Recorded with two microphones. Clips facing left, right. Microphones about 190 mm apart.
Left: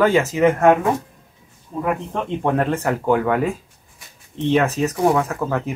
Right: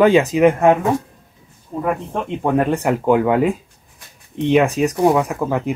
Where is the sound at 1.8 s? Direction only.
5° right (ahead or behind).